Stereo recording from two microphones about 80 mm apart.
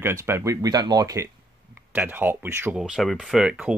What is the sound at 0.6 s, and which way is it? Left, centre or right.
Speech, right.